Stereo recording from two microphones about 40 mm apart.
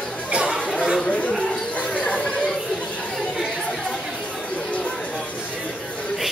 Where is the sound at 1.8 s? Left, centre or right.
Left.